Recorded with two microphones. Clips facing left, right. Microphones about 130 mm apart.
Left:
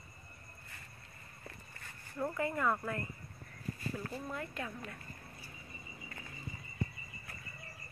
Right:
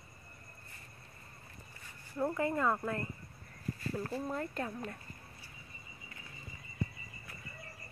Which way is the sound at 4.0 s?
35° right (ahead or behind).